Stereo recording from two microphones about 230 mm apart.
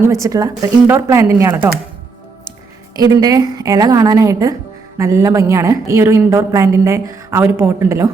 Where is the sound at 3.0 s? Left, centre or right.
Centre.